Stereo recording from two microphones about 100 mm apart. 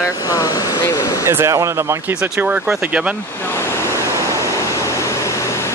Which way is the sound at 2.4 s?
15° right (ahead or behind).